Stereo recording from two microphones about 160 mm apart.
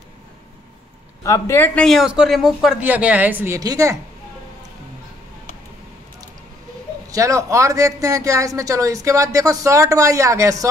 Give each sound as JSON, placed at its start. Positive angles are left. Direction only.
{"t": 1.2, "sound": "a man's voice", "side_deg": 15}
{"t": 1.9, "sound": "a woman's voice", "side_deg": 0}
{"t": 7.1, "sound": "a man's voice", "side_deg": -20}